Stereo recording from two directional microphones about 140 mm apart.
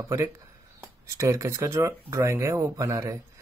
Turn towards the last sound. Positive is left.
turn(degrees=-25)  # may be behind; listen again after turning